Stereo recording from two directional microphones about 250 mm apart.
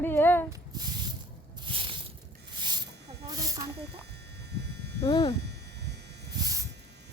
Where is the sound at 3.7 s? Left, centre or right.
Right.